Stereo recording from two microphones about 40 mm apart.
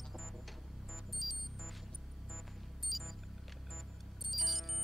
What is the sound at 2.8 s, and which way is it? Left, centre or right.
Music, centre.